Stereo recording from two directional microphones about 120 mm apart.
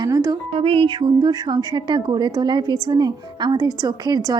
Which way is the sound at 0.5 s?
50° right (ahead or behind).